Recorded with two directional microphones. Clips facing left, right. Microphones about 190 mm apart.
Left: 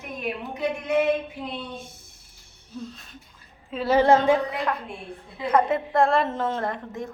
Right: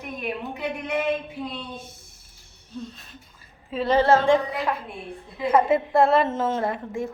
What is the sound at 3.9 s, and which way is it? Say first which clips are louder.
Speech: even; 15° left (ahead or behind).